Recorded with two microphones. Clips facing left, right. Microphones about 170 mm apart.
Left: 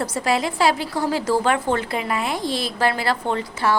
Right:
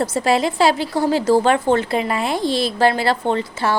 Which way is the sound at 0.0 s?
25° right (ahead or behind).